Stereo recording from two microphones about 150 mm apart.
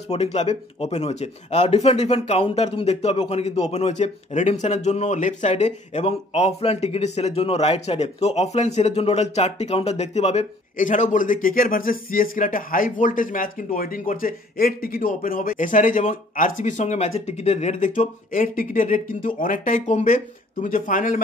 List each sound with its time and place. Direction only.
0.1 s speech: 45° left (ahead or behind)